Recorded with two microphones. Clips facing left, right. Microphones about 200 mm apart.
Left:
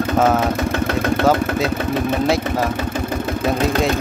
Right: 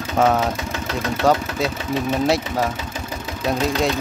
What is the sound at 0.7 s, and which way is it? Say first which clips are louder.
Engine: left 6 dB; 55° left (ahead or behind).